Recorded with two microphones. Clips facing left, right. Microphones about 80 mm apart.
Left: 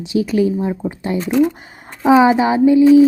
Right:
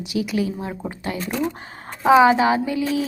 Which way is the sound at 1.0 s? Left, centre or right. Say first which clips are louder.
Left 9 dB; left.